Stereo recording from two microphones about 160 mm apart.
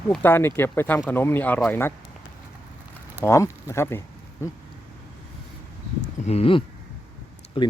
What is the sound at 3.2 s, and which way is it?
Speech, 15° left (ahead or behind).